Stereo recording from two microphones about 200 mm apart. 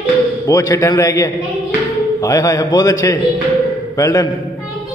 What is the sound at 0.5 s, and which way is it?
A man's voice, 15° left (ahead or behind).